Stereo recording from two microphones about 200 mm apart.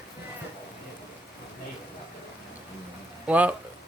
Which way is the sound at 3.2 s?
5° right (ahead or behind).